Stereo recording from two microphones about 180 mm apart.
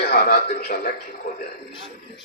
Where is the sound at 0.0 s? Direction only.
60° left (ahead or behind).